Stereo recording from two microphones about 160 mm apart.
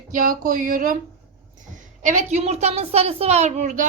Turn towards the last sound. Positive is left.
turn(degrees=-50)  # may be behind; listen again after turning